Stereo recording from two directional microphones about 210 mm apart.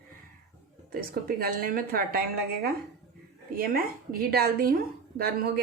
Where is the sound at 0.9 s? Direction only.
45° right (ahead or behind).